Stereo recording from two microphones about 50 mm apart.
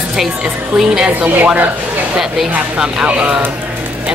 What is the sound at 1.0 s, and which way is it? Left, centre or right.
Speech, right.